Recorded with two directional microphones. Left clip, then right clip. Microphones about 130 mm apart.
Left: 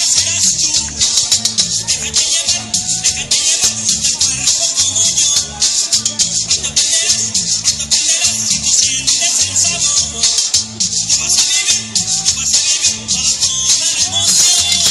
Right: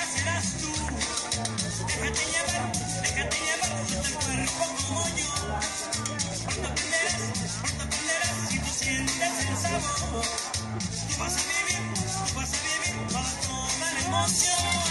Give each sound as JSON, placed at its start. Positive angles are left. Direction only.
{"t": 0.0, "sound": "music", "side_deg": 20}